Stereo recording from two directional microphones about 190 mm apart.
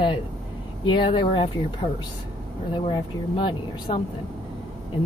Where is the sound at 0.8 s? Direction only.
25° left (ahead or behind).